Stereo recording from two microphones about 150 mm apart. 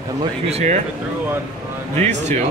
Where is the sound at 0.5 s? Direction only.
45° right (ahead or behind).